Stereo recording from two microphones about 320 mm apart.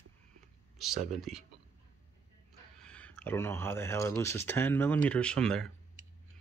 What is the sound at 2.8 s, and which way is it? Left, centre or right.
Speech, centre.